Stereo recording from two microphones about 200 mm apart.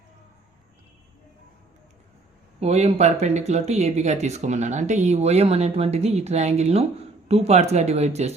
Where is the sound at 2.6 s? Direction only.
30° right (ahead or behind).